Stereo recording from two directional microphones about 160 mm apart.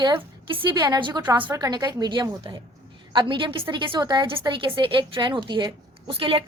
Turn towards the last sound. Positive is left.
turn(degrees=-35)  # may be behind; listen again after turning